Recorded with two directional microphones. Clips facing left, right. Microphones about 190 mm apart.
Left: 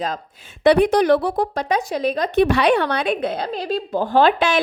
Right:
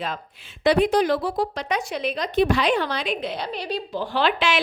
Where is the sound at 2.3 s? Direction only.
65° left (ahead or behind).